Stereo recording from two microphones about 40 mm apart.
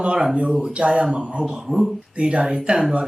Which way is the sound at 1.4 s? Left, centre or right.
Centre.